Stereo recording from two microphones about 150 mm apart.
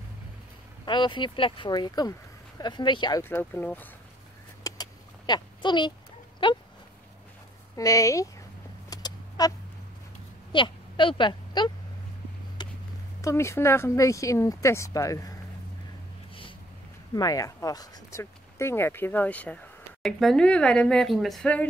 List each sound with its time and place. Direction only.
0.8 s speech: 30° left (ahead or behind)
3.3 s speech: 15° left (ahead or behind)
4.6 s vehicle: 25° left (ahead or behind)
6.4 s speech: 35° left (ahead or behind)
7.7 s speech: 20° left (ahead or behind)
8.9 s a sound: 25° left (ahead or behind)
10.5 s speech: 35° left (ahead or behind)
12.6 s a sound: 30° left (ahead or behind)
13.2 s speech: 20° left (ahead or behind)
17.1 s speech: 25° left (ahead or behind); by 21.6 s 5° left (ahead or behind)